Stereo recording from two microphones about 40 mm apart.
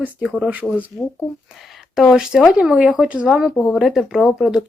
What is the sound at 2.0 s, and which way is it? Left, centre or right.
Speech, centre.